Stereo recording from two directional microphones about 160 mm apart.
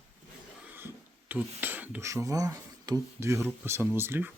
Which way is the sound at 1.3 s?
10° right (ahead or behind).